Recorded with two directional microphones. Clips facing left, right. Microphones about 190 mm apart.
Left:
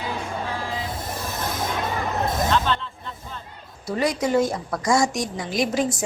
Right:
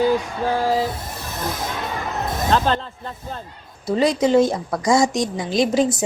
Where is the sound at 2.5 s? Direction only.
40° right (ahead or behind).